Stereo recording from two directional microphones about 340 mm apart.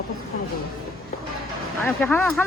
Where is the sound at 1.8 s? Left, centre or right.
Centre.